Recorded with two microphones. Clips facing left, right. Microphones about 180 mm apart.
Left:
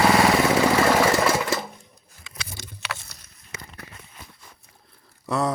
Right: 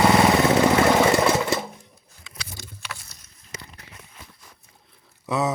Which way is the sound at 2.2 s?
75° left (ahead or behind).